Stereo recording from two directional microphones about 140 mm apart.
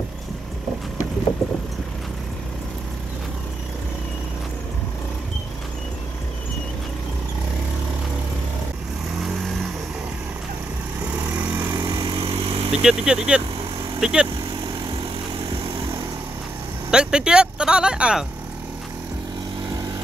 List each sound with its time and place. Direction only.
1.4 s vehicle: centre (ahead or behind)
11.1 s vehicle: 15° right (ahead or behind)
11.7 s vehicle: 35° right (ahead or behind)
12.8 s speech: 5° right (ahead or behind)
16.9 s speech: 5° right (ahead or behind)